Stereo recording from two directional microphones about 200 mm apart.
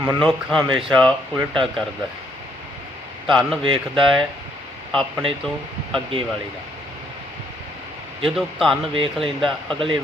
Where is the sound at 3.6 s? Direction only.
25° right (ahead or behind).